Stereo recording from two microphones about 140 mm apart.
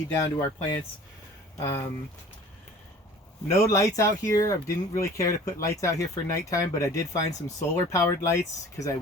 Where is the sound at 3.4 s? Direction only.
25° left (ahead or behind).